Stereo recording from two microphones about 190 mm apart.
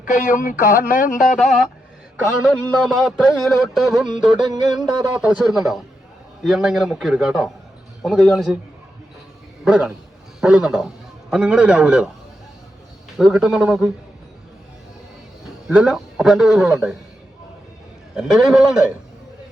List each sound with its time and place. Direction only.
0.0 s speech: 45° left (ahead or behind)
1.4 s a man's voice: centre (ahead or behind)
9.6 s a man's voice: 5° right (ahead or behind)
13.1 s a man's voice: centre (ahead or behind)
15.6 s a man's voice: 5° right (ahead or behind)
18.2 s a man's voice: 5° right (ahead or behind)